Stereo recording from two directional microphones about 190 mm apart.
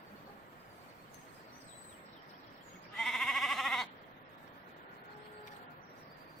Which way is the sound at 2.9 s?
Centre (ahead or behind).